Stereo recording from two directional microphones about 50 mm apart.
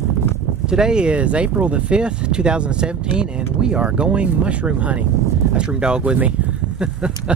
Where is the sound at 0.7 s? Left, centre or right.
Centre.